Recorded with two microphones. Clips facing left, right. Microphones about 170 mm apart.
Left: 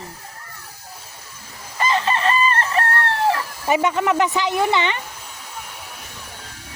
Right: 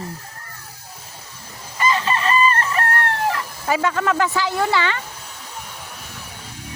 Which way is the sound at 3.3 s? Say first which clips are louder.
Left 2 dB; 20° left (ahead or behind).